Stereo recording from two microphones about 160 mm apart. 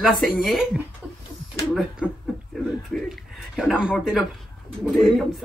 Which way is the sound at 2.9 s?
Centre (ahead or behind).